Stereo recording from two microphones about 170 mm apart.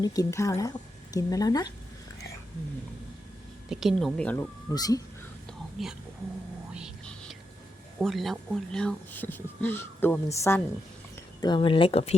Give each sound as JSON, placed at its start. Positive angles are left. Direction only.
{"t": 0.0, "sound": "a woman's voice", "side_deg": 20}
{"t": 3.7, "sound": "speech", "side_deg": 0}
{"t": 4.4, "sound": "a woman's voice", "side_deg": 20}
{"t": 5.8, "sound": "speech", "side_deg": 0}
{"t": 6.7, "sound": "whispering", "side_deg": 0}
{"t": 8.0, "sound": "speech", "side_deg": 0}
{"t": 11.3, "sound": "speech", "side_deg": 25}